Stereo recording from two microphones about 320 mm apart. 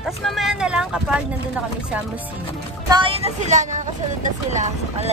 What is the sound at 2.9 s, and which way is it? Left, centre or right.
A woman's voice, centre.